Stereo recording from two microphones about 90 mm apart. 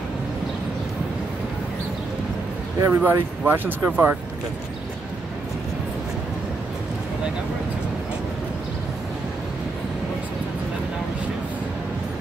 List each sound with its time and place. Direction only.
2.8 s speech: 25° right (ahead or behind)